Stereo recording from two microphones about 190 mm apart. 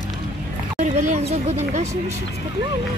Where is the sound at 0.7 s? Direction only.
40° right (ahead or behind).